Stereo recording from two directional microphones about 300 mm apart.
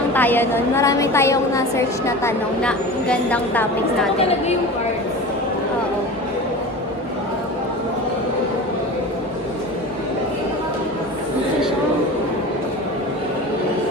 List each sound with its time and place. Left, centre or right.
0.1 s a woman's voice: centre
4.2 s a woman's voice: left